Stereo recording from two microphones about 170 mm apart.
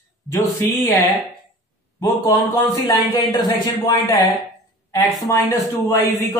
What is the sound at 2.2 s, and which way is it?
Speech, 20° left (ahead or behind).